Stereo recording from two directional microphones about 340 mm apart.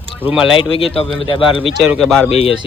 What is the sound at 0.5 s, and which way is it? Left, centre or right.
A man's voice, centre.